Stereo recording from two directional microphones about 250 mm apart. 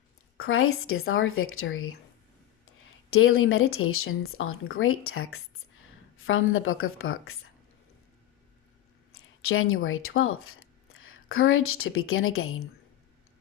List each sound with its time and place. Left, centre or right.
0.3 s speech: left
9.1 s speech: left